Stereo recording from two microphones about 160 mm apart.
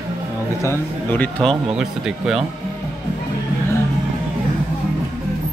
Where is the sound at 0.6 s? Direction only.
15° left (ahead or behind).